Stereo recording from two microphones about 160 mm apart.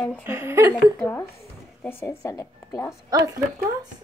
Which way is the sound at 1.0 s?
15° left (ahead or behind).